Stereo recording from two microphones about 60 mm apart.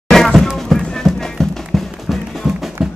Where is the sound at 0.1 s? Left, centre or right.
Centre.